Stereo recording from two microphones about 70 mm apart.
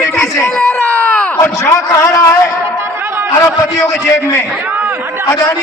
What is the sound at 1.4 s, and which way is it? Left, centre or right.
Speech, left.